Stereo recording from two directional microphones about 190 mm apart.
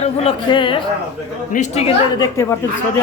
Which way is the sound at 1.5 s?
35° left (ahead or behind).